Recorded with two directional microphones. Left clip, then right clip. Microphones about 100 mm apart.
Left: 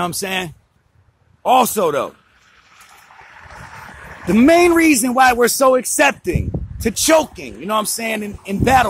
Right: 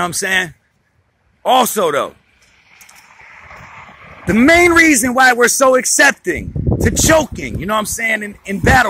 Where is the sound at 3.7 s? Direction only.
50° left (ahead or behind).